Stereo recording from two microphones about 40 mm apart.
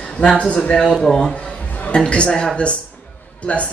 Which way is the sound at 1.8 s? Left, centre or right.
Left.